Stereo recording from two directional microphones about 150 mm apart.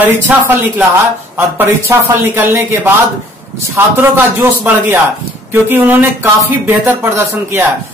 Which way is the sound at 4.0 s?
15° right (ahead or behind).